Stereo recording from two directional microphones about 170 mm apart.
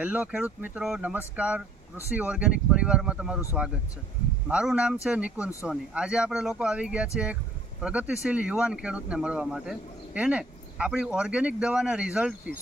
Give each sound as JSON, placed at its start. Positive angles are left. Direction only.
{"t": 0.0, "sound": "speech", "side_deg": -10}
{"t": 4.4, "sound": "speech", "side_deg": -5}